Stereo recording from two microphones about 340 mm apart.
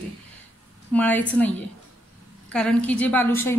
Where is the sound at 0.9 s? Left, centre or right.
Centre.